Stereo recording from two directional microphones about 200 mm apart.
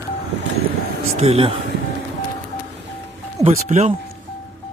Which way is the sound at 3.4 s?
35° right (ahead or behind).